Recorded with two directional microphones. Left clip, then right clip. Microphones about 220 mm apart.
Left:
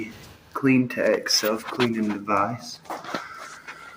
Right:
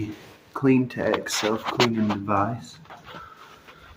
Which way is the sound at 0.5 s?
Centre (ahead or behind).